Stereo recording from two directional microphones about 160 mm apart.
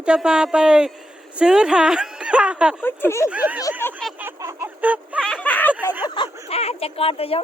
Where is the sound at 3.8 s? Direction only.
15° left (ahead or behind).